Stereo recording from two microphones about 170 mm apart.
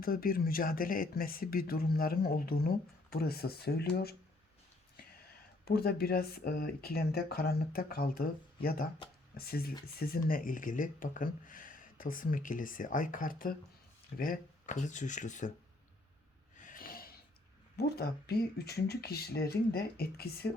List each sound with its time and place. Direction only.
0.0 s speech: 60° left (ahead or behind)
5.2 s speech: 65° left (ahead or behind); by 15.5 s 45° left (ahead or behind)
16.6 s snort: 50° left (ahead or behind)
17.7 s speech: 70° left (ahead or behind)